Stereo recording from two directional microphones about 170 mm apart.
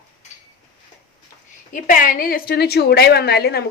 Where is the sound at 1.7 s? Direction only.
50° left (ahead or behind).